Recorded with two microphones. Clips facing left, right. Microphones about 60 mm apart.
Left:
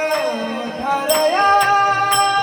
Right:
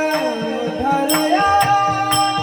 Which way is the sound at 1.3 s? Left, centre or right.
Left.